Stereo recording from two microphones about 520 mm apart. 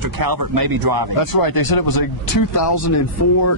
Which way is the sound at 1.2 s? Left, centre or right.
Left.